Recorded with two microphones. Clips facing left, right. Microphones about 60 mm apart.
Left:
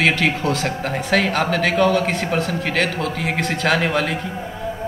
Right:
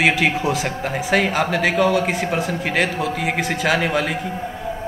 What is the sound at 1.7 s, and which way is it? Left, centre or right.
Speech, left.